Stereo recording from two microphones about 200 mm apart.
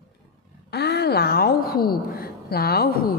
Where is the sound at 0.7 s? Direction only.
55° left (ahead or behind).